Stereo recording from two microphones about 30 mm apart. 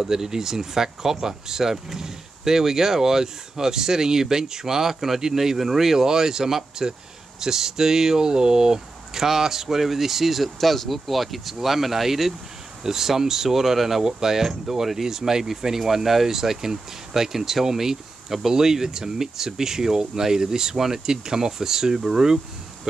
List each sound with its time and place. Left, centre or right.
0.0 s speech: centre